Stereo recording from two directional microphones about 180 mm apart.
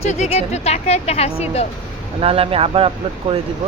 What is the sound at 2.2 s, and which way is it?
Speech, 30° right (ahead or behind).